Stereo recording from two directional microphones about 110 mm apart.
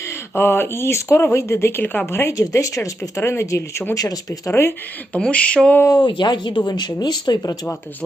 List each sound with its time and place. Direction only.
0.3 s speech: 20° left (ahead or behind)
5.1 s a sound: 10° left (ahead or behind)
6.0 s speech: 45° left (ahead or behind)